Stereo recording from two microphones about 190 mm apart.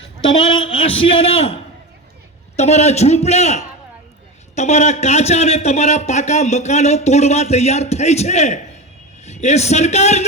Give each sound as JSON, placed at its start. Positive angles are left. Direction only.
{"t": 0.0, "sound": "a man's voice", "side_deg": 30}
{"t": 2.6, "sound": "a man's voice", "side_deg": 35}